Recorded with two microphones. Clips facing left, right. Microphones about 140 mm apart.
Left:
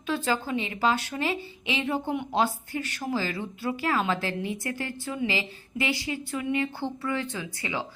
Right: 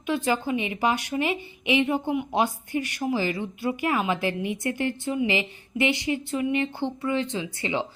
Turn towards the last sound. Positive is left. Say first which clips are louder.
# right 5 dB
turn(degrees=-25)  # may be behind; listen again after turning